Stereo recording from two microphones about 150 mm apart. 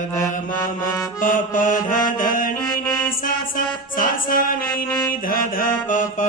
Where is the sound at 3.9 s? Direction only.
65° left (ahead or behind).